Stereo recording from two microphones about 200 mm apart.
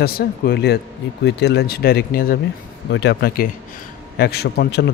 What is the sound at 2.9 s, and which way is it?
A man's voice, 60° left (ahead or behind).